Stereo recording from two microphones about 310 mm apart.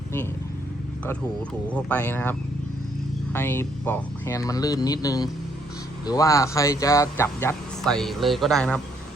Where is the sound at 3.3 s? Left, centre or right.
Centre.